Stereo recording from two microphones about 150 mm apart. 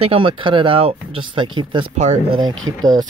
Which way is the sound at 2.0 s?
50° right (ahead or behind).